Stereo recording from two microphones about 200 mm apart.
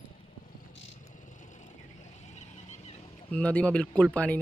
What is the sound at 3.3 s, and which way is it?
Speech, 5° left (ahead or behind).